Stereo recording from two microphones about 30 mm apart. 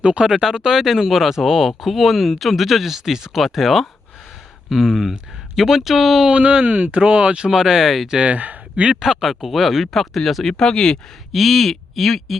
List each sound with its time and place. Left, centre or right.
0.0 s speech: right
0.3 s speech: centre
6.3 s speech: right
7.5 s speech: centre
8.2 s a man's voice: right
9.5 s speech: centre
10.6 s speech: left
10.9 s speech: centre